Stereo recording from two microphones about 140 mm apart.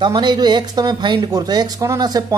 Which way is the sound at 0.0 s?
30° right (ahead or behind).